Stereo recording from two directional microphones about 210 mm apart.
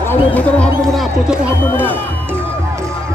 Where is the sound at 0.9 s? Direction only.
5° right (ahead or behind).